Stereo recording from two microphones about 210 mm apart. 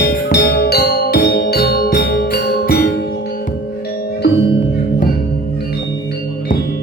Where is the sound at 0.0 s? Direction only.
50° left (ahead or behind).